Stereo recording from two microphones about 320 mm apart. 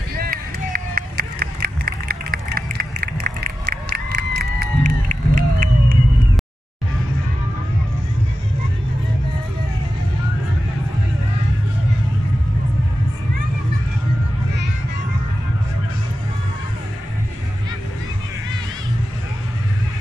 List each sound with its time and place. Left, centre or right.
0.1 s run: right